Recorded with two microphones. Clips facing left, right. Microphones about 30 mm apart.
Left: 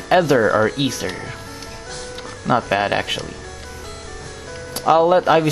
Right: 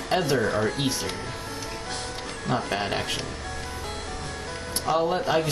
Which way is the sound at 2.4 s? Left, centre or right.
Left.